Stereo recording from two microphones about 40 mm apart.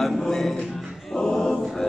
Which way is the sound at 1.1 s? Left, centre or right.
Centre.